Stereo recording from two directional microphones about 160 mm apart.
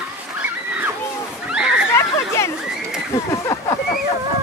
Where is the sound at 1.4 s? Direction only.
5° right (ahead or behind).